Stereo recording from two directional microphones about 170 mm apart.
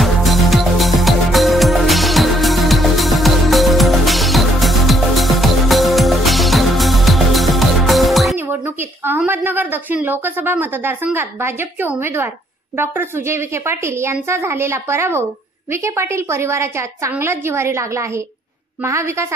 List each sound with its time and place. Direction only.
0.0 s music: centre (ahead or behind)
9.0 s a woman's voice: 10° right (ahead or behind)